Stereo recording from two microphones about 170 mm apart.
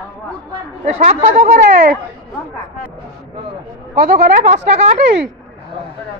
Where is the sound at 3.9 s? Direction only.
65° right (ahead or behind).